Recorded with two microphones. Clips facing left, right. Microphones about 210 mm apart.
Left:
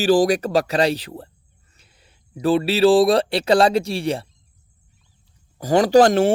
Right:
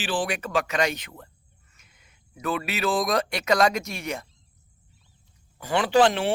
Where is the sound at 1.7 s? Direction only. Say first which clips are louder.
Left 5 dB; 30° left (ahead or behind).